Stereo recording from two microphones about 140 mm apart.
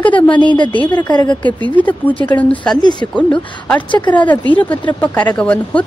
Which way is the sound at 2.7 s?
30° left (ahead or behind).